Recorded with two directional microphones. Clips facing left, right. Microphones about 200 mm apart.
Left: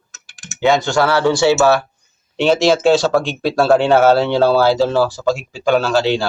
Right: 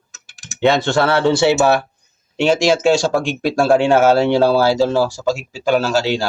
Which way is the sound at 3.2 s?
45° right (ahead or behind).